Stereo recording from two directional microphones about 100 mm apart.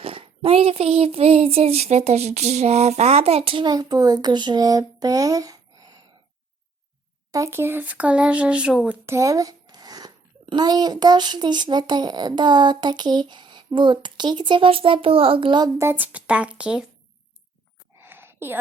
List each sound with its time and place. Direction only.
0.0 s speech: 70° right (ahead or behind)
3.7 s speech: 40° right (ahead or behind)
7.3 s speech: 30° right (ahead or behind); by 9.0 s 10° right (ahead or behind)
9.0 s a sound: 30° right (ahead or behind)
10.4 s a child's voice: 45° right (ahead or behind)
15.8 s speech: 20° right (ahead or behind)
18.0 s a sound: 20° right (ahead or behind)